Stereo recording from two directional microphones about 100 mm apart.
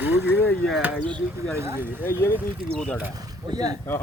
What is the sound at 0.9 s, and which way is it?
Speech, 10° left (ahead or behind).